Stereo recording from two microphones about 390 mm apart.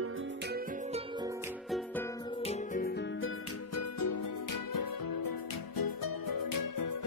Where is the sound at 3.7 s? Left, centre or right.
Left.